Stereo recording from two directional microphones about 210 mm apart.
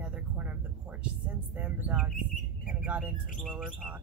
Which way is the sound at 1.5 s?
10° right (ahead or behind).